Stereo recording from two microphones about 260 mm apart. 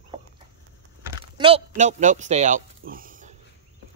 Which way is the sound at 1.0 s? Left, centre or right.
Centre.